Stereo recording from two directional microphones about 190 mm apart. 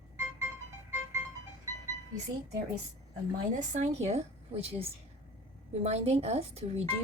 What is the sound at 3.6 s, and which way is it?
A woman's voice, 35° right (ahead or behind).